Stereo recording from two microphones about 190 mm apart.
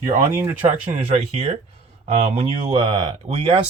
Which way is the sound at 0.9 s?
35° right (ahead or behind).